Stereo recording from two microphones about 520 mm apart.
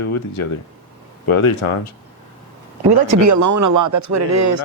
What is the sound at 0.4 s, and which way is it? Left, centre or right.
Speech, left.